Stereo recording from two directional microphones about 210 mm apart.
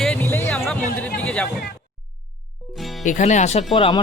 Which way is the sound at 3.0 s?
35° left (ahead or behind).